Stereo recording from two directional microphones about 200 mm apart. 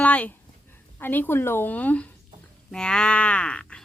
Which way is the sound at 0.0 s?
5° left (ahead or behind).